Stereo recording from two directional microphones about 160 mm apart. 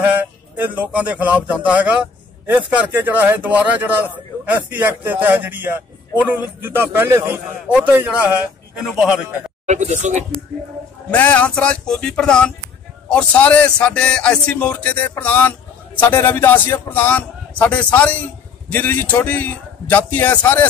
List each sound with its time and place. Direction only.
0.6 s a man's voice: 10° right (ahead or behind)
9.7 s speech: 45° right (ahead or behind)
11.1 s speech: 10° left (ahead or behind)